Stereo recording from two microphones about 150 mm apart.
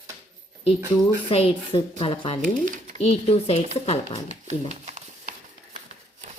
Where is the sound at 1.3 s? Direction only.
40° left (ahead or behind).